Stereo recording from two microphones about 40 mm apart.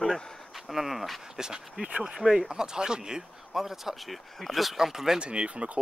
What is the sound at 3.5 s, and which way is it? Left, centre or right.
Speech, centre.